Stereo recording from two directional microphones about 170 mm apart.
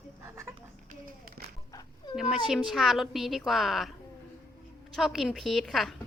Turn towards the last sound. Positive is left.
turn(degrees=0)  # may be behind; listen again after turning